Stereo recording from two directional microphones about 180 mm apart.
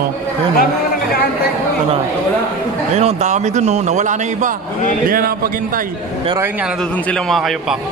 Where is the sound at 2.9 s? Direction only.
35° right (ahead or behind).